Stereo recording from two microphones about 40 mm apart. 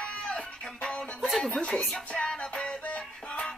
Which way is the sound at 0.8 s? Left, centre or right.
Left.